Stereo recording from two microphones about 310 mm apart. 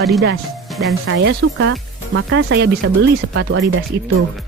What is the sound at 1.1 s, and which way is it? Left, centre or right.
Speech, right.